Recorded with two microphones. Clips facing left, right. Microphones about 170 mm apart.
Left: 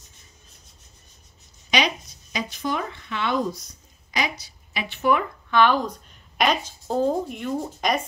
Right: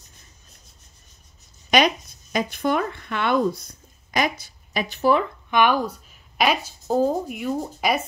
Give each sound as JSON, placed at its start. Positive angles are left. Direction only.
{"t": 1.7, "sound": "speech", "side_deg": -50}
{"t": 5.5, "sound": "speech", "side_deg": -15}